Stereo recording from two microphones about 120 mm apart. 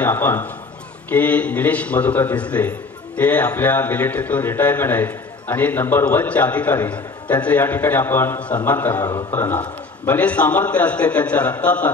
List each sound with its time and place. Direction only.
0.0 s a man's voice: 15° left (ahead or behind)